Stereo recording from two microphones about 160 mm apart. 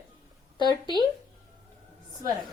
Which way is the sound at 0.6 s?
25° right (ahead or behind).